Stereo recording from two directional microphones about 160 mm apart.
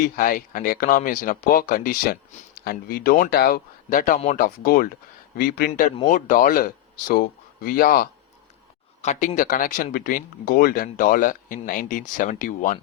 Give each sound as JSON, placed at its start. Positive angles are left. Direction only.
{"t": 0.2, "sound": "speech", "side_deg": 55}
{"t": 6.1, "sound": "speech", "side_deg": 55}
{"t": 9.0, "sound": "speech", "side_deg": 50}